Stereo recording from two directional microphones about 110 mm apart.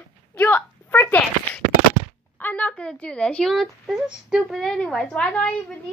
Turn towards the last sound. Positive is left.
turn(degrees=10)  # may be behind; listen again after turning